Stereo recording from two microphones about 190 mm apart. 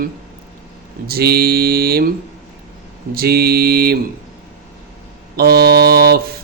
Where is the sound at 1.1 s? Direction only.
55° right (ahead or behind).